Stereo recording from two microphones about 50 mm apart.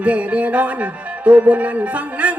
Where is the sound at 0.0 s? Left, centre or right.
Right.